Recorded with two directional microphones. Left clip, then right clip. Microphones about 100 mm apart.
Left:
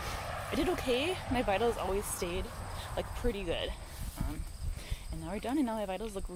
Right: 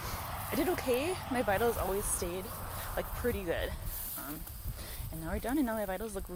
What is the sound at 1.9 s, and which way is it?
Speech, 15° right (ahead or behind).